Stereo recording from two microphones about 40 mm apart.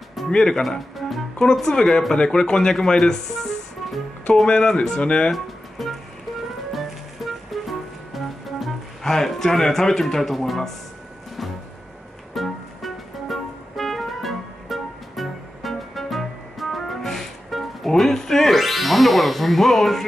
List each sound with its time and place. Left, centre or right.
0.3 s speech: centre
0.7 s speech: centre
1.4 s speech: centre
5.3 s music: centre
9.0 s speech: centre
12.4 s music: centre